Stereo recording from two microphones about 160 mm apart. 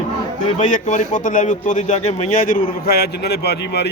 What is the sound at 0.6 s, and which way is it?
A man's voice, 50° left (ahead or behind).